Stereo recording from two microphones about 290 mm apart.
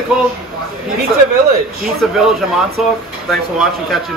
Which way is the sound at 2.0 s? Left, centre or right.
Centre.